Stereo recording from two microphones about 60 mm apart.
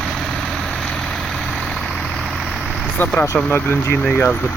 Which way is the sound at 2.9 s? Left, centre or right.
Left.